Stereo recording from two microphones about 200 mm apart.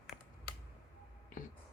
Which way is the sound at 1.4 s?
40° left (ahead or behind).